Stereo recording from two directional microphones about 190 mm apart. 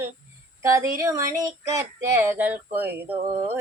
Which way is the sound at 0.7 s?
15° right (ahead or behind).